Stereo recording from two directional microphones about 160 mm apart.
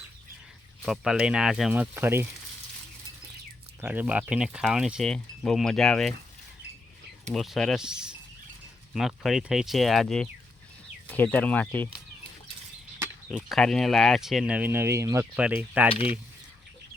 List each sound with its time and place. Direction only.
0.9 s speech: 5° right (ahead or behind)
3.8 s speech: 10° right (ahead or behind)
7.3 s speech: centre (ahead or behind)
13.2 s speech: 5° left (ahead or behind)
15.9 s mechanisms: 35° left (ahead or behind)